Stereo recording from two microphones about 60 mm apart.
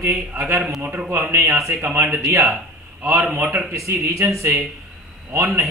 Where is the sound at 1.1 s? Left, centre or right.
Right.